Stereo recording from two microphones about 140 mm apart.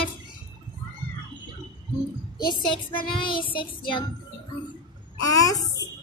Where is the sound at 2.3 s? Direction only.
30° left (ahead or behind).